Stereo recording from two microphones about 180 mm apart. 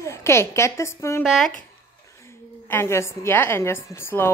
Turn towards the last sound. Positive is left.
turn(degrees=15)  # may be behind; listen again after turning